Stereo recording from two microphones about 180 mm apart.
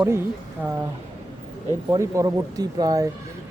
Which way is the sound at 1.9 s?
20° right (ahead or behind).